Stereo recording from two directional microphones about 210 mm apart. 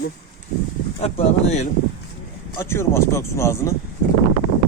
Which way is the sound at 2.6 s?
10° left (ahead or behind).